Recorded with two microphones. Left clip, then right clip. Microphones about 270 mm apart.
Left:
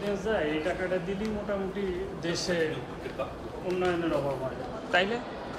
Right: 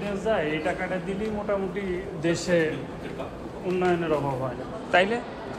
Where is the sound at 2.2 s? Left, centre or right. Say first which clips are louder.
Right 7 dB; centre.